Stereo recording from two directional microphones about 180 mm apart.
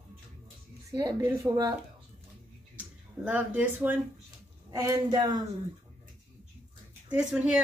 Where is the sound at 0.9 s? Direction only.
25° right (ahead or behind).